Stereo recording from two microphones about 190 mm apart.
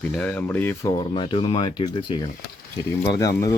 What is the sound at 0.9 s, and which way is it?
Speech, 25° left (ahead or behind).